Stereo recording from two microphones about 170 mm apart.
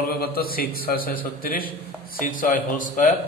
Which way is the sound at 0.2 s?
60° left (ahead or behind).